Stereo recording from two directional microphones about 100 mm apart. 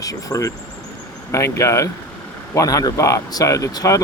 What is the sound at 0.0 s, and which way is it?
Speech, 35° left (ahead or behind).